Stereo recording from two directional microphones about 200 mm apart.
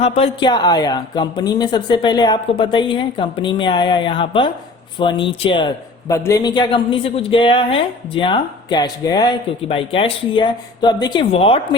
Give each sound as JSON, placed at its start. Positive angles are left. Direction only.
{"t": 0.0, "sound": "a man's voice", "side_deg": 30}